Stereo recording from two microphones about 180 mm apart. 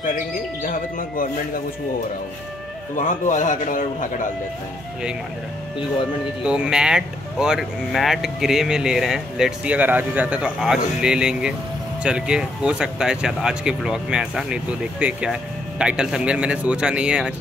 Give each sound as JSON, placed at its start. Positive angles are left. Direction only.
{"t": 0.7, "sound": "a man's voice", "side_deg": 50}
{"t": 3.0, "sound": "a man's voice", "side_deg": 45}
{"t": 6.4, "sound": "speech", "side_deg": -5}